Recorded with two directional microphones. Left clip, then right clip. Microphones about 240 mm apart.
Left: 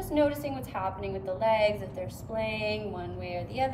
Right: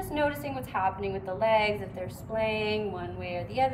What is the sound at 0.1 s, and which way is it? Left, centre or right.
A woman's voice, centre.